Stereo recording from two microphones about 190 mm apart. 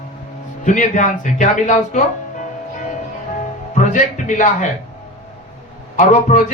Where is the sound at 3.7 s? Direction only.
40° left (ahead or behind).